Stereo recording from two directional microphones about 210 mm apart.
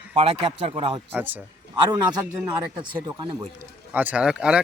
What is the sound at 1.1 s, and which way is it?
Speech, 10° right (ahead or behind).